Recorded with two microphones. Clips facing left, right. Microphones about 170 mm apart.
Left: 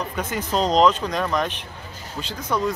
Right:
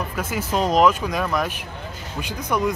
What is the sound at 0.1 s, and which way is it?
Speech, 5° right (ahead or behind).